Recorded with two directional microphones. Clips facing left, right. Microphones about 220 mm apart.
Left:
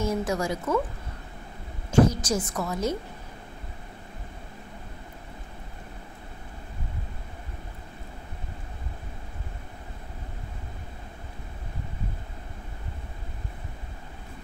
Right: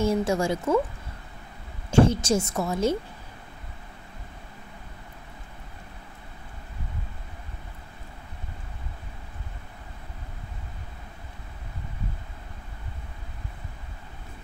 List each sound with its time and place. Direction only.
0.0 s a woman's voice: 30° right (ahead or behind)
1.9 s a woman's voice: 30° right (ahead or behind)